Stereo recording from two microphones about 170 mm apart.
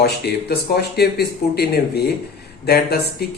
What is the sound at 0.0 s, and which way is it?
Speech, 70° left (ahead or behind).